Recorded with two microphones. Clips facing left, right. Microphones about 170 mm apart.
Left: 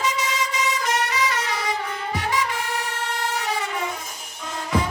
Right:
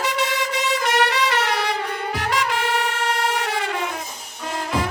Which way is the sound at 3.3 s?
65° right (ahead or behind).